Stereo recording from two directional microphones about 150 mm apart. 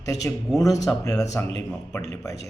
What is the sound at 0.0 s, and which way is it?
A man's voice, 20° left (ahead or behind).